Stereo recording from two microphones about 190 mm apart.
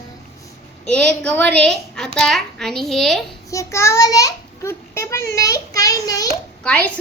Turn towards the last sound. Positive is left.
turn(degrees=5)  # may be behind; listen again after turning